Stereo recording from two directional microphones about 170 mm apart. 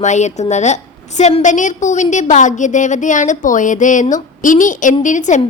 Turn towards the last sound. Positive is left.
turn(degrees=45)  # may be behind; listen again after turning